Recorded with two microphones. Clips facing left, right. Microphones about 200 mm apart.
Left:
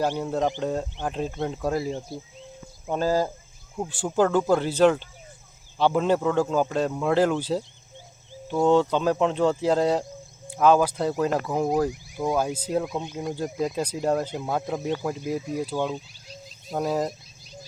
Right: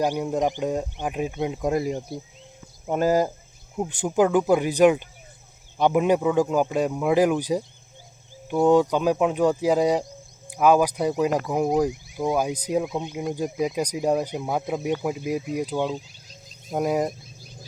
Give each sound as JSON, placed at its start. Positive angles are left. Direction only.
{"t": 0.0, "sound": "speech", "side_deg": -15}